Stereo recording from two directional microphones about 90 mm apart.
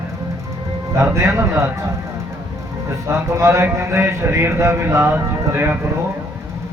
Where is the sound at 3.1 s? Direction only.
30° right (ahead or behind).